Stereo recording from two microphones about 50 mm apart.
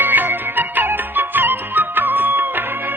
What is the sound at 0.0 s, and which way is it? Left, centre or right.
Music, right.